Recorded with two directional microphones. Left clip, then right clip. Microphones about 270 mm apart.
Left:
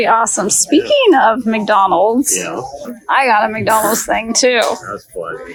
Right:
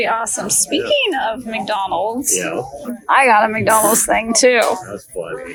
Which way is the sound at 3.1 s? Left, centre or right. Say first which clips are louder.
Even; centre.